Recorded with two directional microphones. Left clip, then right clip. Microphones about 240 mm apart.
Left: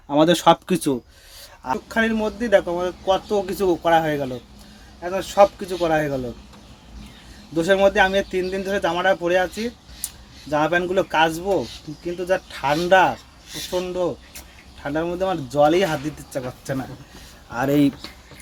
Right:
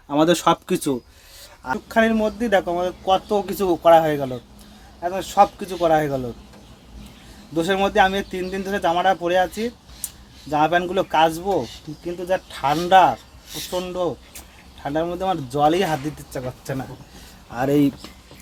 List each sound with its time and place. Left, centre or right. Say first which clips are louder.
0.1 s speech: left 2 dB; centre
1.9 s speech: right 4 dB; centre
7.5 s speech: left 2 dB; centre
10.5 s speech: right 1 dB; centre